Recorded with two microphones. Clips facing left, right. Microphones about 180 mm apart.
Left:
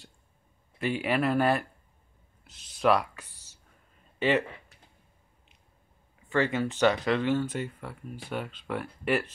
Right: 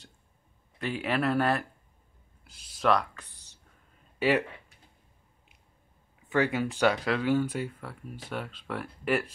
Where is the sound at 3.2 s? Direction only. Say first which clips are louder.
Even; 65° right (ahead or behind).